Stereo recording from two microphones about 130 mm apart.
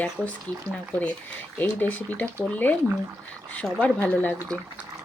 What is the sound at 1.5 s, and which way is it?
Speech, 15° left (ahead or behind).